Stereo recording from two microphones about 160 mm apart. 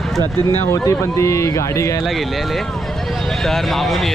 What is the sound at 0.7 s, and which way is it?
Speech, 20° left (ahead or behind).